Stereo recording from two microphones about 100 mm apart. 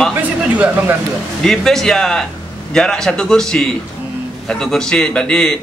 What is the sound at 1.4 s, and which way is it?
A man's voice, 5° left (ahead or behind).